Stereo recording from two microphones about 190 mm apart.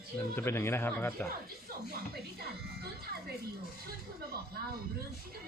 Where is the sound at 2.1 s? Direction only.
55° right (ahead or behind).